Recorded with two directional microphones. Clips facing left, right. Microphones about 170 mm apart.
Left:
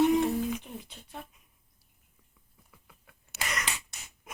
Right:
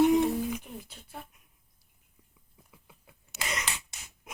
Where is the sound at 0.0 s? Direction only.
10° right (ahead or behind).